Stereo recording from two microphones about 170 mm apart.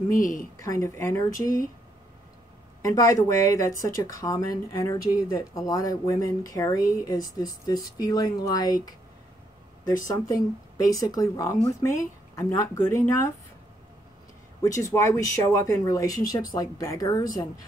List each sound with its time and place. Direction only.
0.2 s a woman's voice: 50° left (ahead or behind)
0.7 s speech: 15° left (ahead or behind)
2.8 s speech: 20° left (ahead or behind)
10.0 s speech: 20° left (ahead or behind)
14.6 s speech: 20° left (ahead or behind)